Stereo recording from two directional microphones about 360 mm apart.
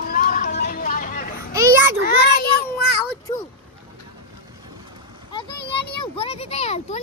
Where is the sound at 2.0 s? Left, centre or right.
Left.